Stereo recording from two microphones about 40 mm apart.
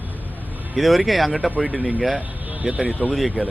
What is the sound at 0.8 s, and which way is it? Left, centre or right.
Speech, centre.